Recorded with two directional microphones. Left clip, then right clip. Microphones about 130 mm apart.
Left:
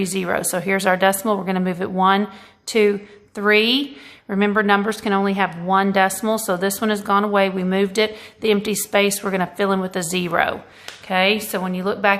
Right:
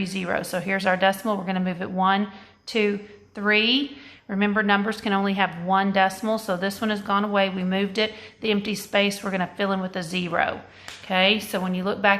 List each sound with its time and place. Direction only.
0.0 s a woman's voice: 35° left (ahead or behind)
11.1 s a woman's voice: 15° left (ahead or behind)